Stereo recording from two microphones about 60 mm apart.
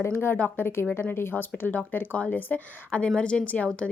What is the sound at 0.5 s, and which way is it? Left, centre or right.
A woman's voice, left.